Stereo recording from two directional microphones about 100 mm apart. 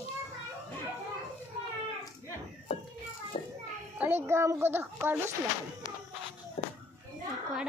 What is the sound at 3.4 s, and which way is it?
Children playing, 90° left.